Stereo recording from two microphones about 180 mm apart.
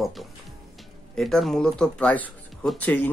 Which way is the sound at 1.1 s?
Centre (ahead or behind).